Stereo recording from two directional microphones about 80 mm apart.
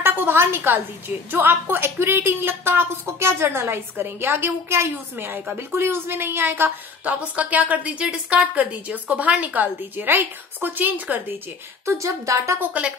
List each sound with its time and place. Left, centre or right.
0.0 s a woman's voice: right
11.8 s speech: right
12.5 s a woman's voice: centre